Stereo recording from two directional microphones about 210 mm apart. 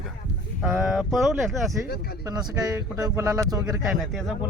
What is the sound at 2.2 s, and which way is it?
Speech, 15° right (ahead or behind).